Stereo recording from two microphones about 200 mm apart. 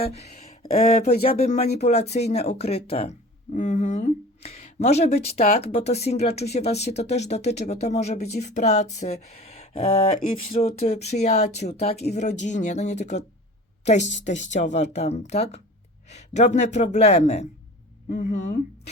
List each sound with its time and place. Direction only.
0.0 s speech: 30° left (ahead or behind)